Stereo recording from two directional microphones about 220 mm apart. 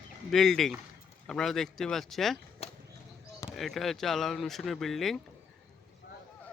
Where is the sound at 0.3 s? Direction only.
Centre (ahead or behind).